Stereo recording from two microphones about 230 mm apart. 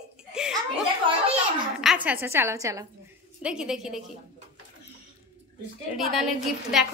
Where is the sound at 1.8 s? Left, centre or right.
Centre.